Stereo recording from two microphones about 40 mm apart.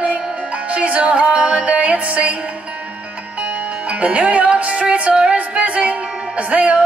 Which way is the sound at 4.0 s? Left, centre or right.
Right.